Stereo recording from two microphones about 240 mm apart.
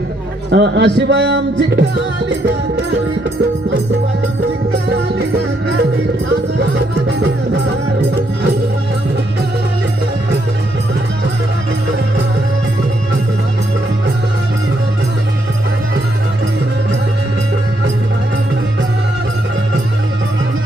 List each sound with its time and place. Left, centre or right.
0.5 s speech: right
6.6 s music: right